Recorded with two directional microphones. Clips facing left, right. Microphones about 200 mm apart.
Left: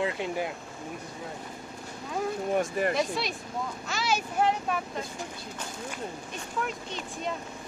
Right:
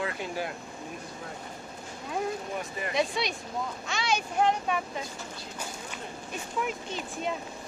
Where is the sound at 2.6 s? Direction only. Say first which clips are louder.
Left 8 dB; 50° left (ahead or behind).